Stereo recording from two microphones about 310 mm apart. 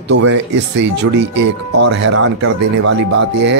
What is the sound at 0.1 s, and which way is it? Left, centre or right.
Speech, right.